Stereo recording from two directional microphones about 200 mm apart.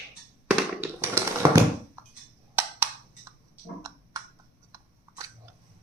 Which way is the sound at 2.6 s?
10° right (ahead or behind).